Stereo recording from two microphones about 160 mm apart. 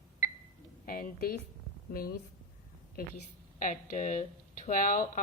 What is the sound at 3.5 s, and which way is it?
Speech, 50° left (ahead or behind).